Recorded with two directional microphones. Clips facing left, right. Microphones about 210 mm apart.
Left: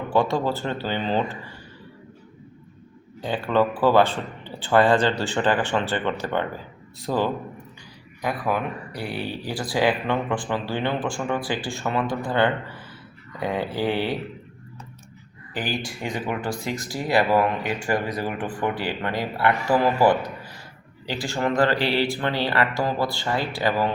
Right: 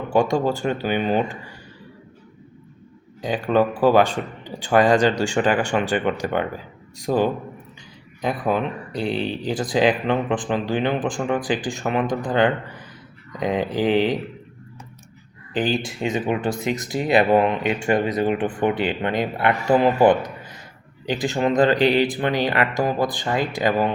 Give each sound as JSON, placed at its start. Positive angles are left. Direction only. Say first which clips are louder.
{"t": 0.1, "sound": "a man's voice", "louder": "right 3 dB", "side_deg": -15}
{"t": 3.2, "sound": "a man's voice", "louder": "right 2 dB", "side_deg": -15}
{"t": 15.5, "sound": "a man's voice", "louder": "right 6 dB", "side_deg": -20}